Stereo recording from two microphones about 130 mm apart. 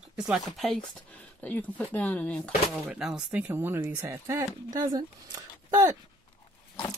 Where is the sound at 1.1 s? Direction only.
10° left (ahead or behind).